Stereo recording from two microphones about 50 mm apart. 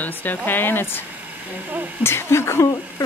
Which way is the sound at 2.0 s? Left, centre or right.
Left.